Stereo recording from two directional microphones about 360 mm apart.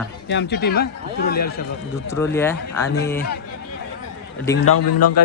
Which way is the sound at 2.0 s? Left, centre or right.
Centre.